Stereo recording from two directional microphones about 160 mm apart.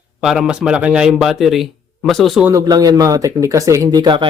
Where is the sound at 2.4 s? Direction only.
20° right (ahead or behind).